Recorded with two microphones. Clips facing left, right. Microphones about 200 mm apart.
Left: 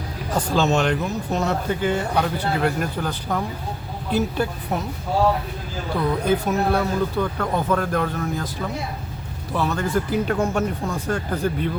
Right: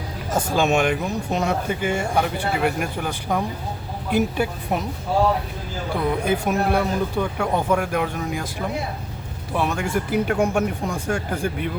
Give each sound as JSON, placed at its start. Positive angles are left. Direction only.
{"t": 0.3, "sound": "speech", "side_deg": -25}
{"t": 0.5, "sound": "speech", "side_deg": -10}
{"t": 6.1, "sound": "speech", "side_deg": -10}
{"t": 9.5, "sound": "speech", "side_deg": -10}